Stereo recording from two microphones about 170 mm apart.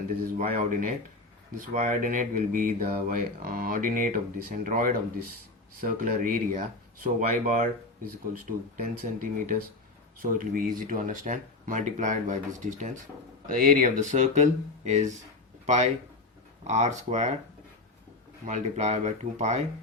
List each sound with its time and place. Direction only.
0.3 s speech: 50° right (ahead or behind)
18.4 s speech: 45° right (ahead or behind)